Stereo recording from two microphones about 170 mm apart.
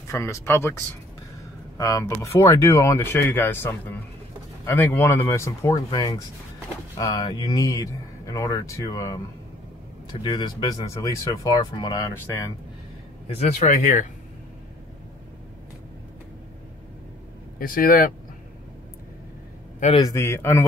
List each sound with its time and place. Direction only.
0.1 s speech: 15° left (ahead or behind)
1.8 s a man's voice: 20° left (ahead or behind)
10.2 s a man's voice: 25° left (ahead or behind)
13.3 s speech: 40° left (ahead or behind)
17.6 s speech: 55° left (ahead or behind)
20.0 s speech: 20° left (ahead or behind)